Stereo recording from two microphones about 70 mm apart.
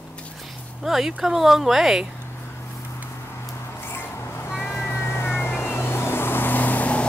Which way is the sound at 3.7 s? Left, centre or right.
Left.